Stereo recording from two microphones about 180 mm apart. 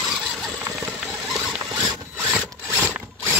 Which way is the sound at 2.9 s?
10° right (ahead or behind).